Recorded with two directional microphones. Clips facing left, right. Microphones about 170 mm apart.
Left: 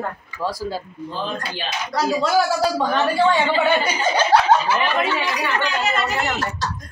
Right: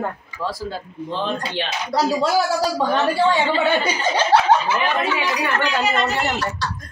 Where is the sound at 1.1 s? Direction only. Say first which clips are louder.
Right 4 dB; 70° right (ahead or behind).